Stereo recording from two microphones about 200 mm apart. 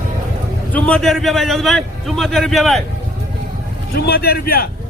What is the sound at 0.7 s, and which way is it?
A man's voice, 5° left (ahead or behind).